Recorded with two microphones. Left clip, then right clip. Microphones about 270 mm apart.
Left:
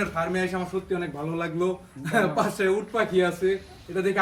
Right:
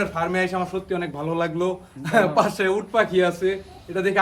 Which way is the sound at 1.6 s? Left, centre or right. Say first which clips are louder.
Right 2 dB; right.